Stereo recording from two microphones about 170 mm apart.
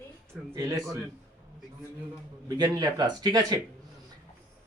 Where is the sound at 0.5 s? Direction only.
20° right (ahead or behind).